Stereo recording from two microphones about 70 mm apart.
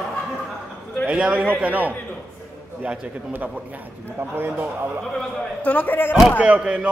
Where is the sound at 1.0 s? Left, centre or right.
Centre.